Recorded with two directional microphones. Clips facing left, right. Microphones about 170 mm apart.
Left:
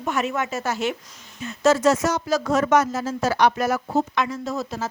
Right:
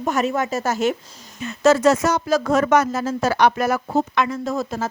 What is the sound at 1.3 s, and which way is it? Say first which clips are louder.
Speech: right 3 dB; 70° right (ahead or behind).